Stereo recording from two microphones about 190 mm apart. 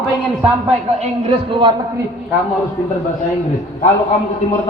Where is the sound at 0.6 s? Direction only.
30° right (ahead or behind).